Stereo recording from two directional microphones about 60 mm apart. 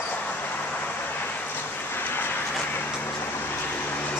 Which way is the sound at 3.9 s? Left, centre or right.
Left.